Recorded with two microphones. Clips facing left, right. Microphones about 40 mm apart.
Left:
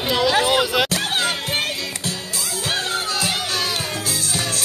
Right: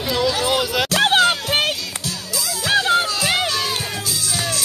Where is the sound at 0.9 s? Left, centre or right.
Right.